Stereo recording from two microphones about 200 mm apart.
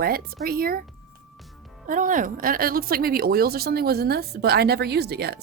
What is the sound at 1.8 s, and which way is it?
A woman's voice, 40° right (ahead or behind).